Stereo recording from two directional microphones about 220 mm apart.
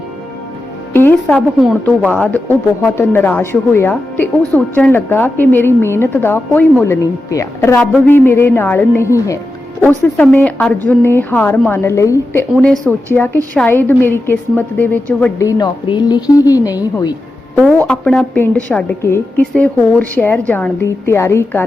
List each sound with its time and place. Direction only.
0.9 s a woman's voice: 10° left (ahead or behind)
1.4 s a woman's voice: 5° right (ahead or behind)
12.5 s a woman's voice: centre (ahead or behind); by 17.6 s 15° left (ahead or behind)
17.6 s a woman's voice: centre (ahead or behind)